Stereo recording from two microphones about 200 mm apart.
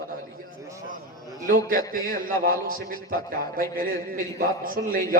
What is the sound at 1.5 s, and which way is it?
A man's voice, 45° right (ahead or behind).